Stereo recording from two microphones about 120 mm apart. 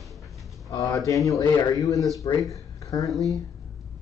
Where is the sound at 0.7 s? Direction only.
30° left (ahead or behind).